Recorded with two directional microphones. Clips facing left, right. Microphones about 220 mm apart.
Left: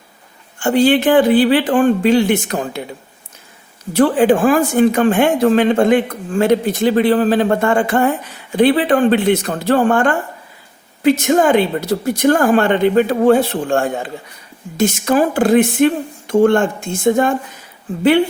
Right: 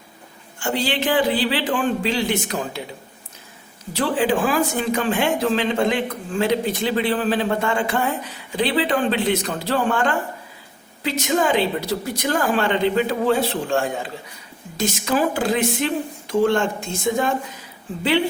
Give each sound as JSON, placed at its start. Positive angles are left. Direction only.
{"t": 0.6, "sound": "speech", "side_deg": 50}
{"t": 3.9, "sound": "speech", "side_deg": 50}